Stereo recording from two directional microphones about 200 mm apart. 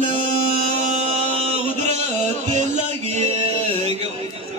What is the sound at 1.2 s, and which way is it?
Music, 30° right (ahead or behind).